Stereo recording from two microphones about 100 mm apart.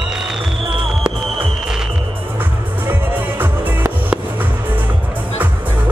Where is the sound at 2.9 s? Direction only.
20° right (ahead or behind).